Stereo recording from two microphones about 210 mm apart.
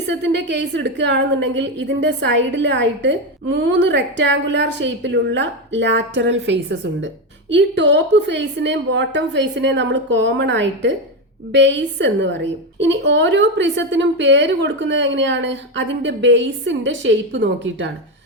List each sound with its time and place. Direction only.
0.1 s a woman's voice: 55° right (ahead or behind)